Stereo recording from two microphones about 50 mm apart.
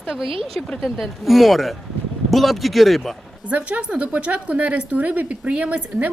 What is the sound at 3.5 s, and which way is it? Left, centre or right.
A woman's voice, right.